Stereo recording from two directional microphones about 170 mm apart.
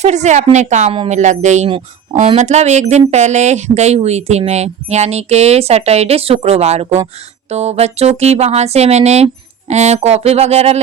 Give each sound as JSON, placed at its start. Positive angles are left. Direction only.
{"t": 0.0, "sound": "a woman's voice", "side_deg": -40}